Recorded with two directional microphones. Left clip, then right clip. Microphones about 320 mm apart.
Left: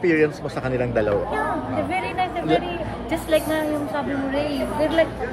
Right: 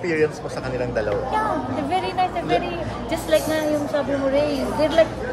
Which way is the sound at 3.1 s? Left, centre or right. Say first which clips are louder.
Right 1 dB; centre.